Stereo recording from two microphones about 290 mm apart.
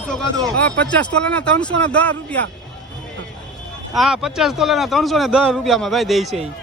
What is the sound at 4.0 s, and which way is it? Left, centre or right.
Speech, centre.